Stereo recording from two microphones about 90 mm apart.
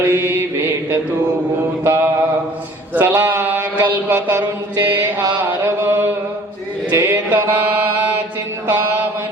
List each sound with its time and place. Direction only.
0.1 s mantra: 25° right (ahead or behind)
1.8 s mantra: 25° right (ahead or behind)
5.4 s chant: 25° right (ahead or behind)
6.9 s a sound: 20° right (ahead or behind)